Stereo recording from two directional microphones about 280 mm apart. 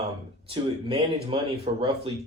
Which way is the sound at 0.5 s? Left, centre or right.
Centre.